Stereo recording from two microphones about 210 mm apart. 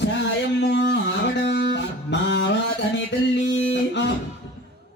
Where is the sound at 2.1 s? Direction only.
55° left (ahead or behind).